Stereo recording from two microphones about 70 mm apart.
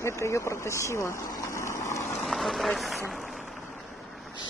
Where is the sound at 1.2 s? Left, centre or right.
Left.